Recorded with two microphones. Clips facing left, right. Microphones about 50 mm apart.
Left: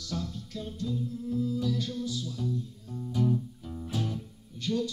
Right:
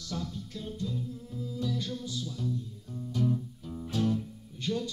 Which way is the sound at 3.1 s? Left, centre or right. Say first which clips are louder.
Left 2 dB; centre.